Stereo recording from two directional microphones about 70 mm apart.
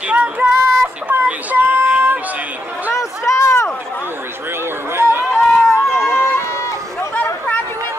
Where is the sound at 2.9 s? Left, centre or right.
Left.